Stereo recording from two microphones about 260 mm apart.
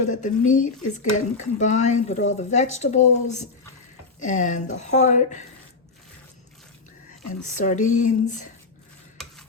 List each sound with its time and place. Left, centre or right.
0.1 s speech: left
7.4 s speech: left